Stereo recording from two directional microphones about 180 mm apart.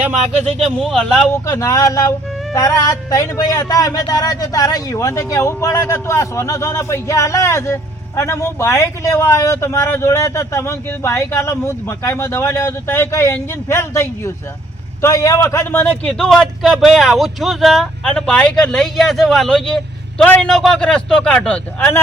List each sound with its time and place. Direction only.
0.6 s a man's voice: centre (ahead or behind)
1.5 s a man's voice: 15° left (ahead or behind)